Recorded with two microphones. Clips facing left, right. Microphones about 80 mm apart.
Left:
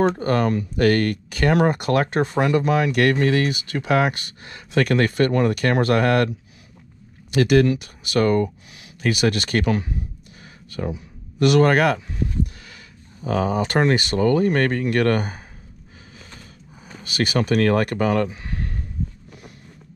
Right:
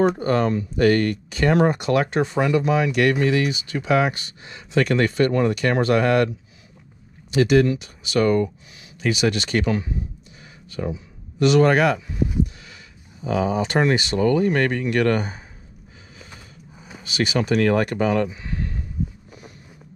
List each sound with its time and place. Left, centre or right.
0.2 s speech: left
7.2 s speech: left
11.3 s speech: left
13.2 s speech: left
17.0 s speech: left